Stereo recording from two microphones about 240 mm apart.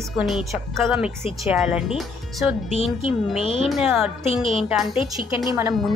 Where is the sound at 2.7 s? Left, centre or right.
Left.